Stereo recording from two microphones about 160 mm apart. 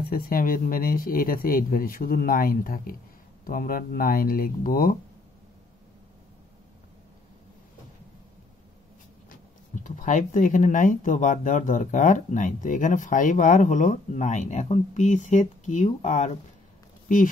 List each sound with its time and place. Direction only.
0.0 s speech: 65° left (ahead or behind)
9.8 s speech: 55° left (ahead or behind)